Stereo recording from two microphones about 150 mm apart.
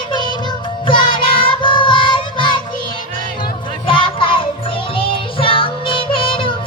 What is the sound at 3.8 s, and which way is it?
Music, 35° left (ahead or behind).